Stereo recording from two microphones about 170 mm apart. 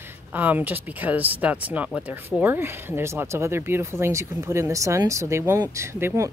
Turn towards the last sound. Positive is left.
turn(degrees=-15)  # may be behind; listen again after turning